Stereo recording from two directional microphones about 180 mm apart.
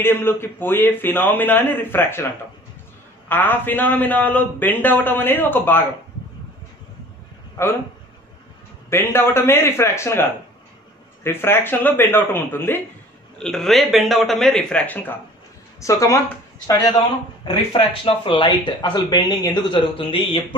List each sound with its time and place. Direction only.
0.0 s a man's voice: 10° left (ahead or behind)
3.3 s a man's voice: 10° left (ahead or behind)
8.9 s a man's voice: 15° left (ahead or behind)
11.2 s a man's voice: 10° left (ahead or behind)
17.7 s speech: 30° left (ahead or behind)